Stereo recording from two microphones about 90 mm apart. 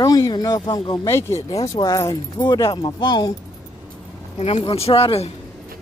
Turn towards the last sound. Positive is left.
turn(degrees=90)